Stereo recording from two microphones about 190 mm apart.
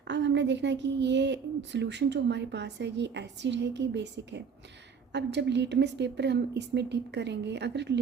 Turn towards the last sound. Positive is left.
turn(degrees=-65)  # may be behind; listen again after turning